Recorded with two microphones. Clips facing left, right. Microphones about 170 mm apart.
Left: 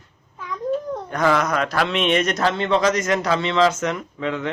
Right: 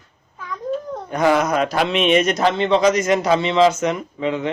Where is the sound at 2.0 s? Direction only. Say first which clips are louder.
Right 4 dB; 5° right (ahead or behind).